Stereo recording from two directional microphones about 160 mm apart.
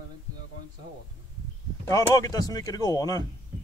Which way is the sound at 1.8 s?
20° left (ahead or behind).